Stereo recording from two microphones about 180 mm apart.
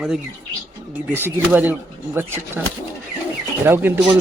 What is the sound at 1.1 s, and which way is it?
Speech, 10° right (ahead or behind).